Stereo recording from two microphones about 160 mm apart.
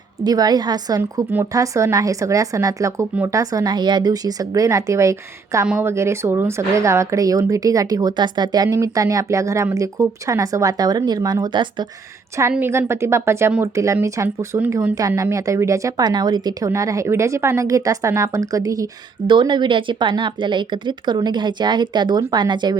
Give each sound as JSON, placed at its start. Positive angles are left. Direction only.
{"t": 0.3, "sound": "a woman's voice", "side_deg": -25}
{"t": 12.4, "sound": "a woman's voice", "side_deg": -15}
{"t": 14.9, "sound": "a woman's voice", "side_deg": -20}